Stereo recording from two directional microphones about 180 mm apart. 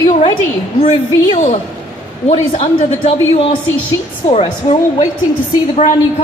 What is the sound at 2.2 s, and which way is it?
A woman's voice, 35° left (ahead or behind).